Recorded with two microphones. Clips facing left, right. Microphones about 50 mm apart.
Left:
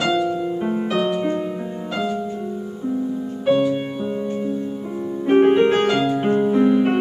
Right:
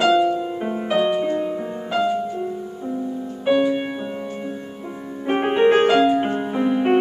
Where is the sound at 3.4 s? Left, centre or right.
Centre.